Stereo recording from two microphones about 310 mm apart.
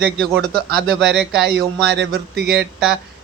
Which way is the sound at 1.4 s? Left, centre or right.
Right.